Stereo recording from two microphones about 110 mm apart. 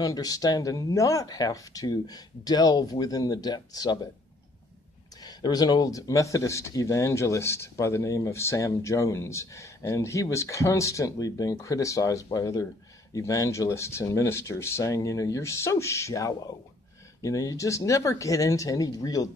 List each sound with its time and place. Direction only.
0.0 s speech: 35° left (ahead or behind)
5.2 s speech: 35° left (ahead or behind)